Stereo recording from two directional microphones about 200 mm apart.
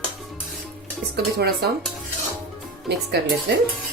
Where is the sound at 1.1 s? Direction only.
50° right (ahead or behind).